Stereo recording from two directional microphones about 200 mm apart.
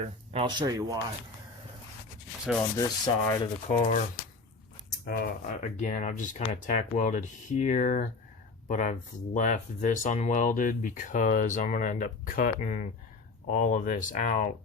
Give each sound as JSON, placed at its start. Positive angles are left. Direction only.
{"t": 0.0, "sound": "speech", "side_deg": -30}
{"t": 0.6, "sound": "speech", "side_deg": -15}
{"t": 2.7, "sound": "rub", "side_deg": 15}
{"t": 3.7, "sound": "speech", "side_deg": 35}
{"t": 5.0, "sound": "speech", "side_deg": 50}